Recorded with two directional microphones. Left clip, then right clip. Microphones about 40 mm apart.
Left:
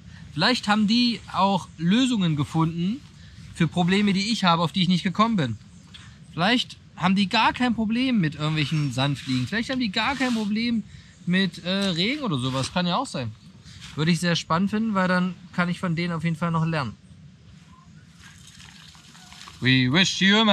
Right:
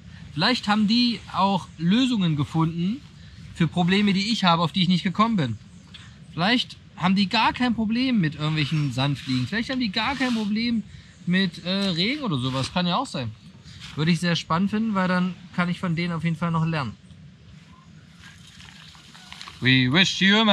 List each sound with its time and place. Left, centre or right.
0.3 s speech: centre
19.4 s speech: centre